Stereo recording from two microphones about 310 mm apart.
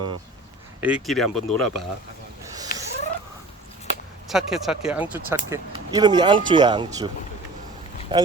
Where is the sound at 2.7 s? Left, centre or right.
Left.